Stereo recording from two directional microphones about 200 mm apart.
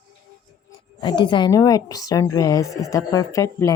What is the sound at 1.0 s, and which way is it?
A woman's voice, 20° left (ahead or behind).